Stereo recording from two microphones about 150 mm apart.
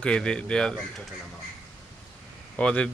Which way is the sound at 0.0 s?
5° left (ahead or behind).